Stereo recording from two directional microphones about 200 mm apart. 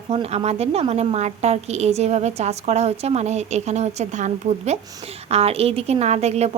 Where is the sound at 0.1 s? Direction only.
30° right (ahead or behind).